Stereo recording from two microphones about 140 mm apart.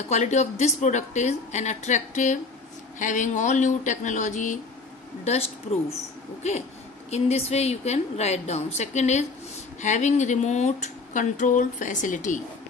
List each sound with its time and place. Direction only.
0.1 s speech: 55° left (ahead or behind)
5.2 s a woman's voice: 50° left (ahead or behind)
7.1 s a woman's voice: 50° left (ahead or behind); by 12.4 s 65° left (ahead or behind)